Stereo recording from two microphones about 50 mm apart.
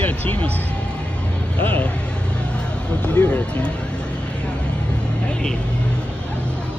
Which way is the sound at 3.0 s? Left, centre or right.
Left.